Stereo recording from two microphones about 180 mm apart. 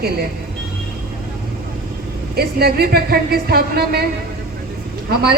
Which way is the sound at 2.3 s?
60° right (ahead or behind).